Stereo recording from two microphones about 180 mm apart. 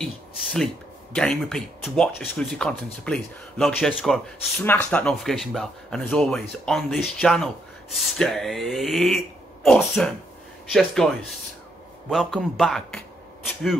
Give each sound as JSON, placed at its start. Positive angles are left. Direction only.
{"t": 0.0, "sound": "a sound", "side_deg": 0}
{"t": 1.1, "sound": "speech", "side_deg": 5}
{"t": 12.1, "sound": "speech", "side_deg": 0}